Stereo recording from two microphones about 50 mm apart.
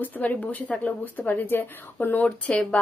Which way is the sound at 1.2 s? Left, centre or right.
Left.